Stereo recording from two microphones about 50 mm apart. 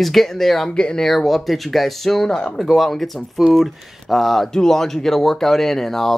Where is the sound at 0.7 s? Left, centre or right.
Centre.